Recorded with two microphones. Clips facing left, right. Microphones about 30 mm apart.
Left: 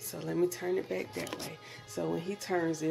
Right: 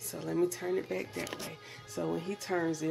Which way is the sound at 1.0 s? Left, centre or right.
Left.